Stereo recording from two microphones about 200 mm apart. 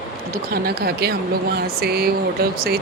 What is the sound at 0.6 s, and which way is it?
Speech, 55° right (ahead or behind).